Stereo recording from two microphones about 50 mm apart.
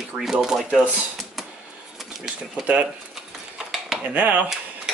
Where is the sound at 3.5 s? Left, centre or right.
Centre.